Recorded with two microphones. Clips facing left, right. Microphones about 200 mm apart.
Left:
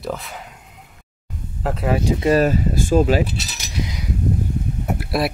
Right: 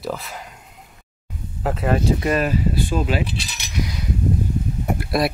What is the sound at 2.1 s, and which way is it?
Speech, 25° left (ahead or behind).